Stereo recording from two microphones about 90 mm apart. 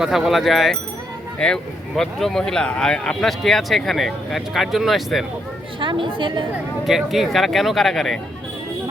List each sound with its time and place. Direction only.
0.0 s speech: 5° right (ahead or behind)
5.8 s a woman's voice: 70° right (ahead or behind)
6.8 s speech: 5° right (ahead or behind)